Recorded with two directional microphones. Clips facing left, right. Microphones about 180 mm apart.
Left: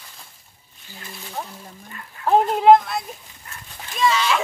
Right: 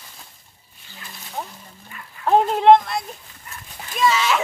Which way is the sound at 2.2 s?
Centre (ahead or behind).